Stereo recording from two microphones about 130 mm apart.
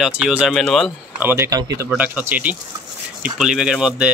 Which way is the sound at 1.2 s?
20° right (ahead or behind).